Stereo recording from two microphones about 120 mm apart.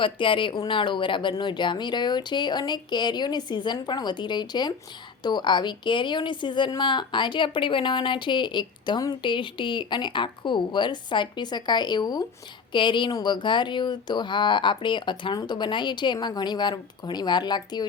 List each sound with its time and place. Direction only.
0.0 s a woman's voice: 45° left (ahead or behind)